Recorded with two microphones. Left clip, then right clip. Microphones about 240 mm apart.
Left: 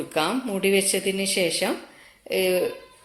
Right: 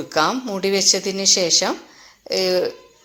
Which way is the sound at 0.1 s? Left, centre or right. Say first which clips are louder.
Right 6 dB; centre.